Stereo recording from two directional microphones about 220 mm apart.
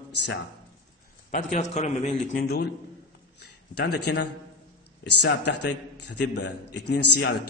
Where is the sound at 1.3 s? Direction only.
35° left (ahead or behind).